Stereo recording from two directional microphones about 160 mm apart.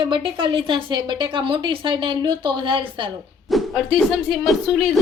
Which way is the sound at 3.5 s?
Centre (ahead or behind).